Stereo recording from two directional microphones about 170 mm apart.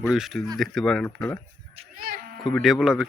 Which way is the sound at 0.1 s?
Centre (ahead or behind).